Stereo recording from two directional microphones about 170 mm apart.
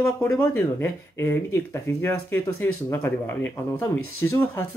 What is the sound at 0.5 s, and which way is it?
Speech, 15° left (ahead or behind).